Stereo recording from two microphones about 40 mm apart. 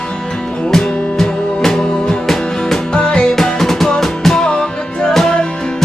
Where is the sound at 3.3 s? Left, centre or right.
Centre.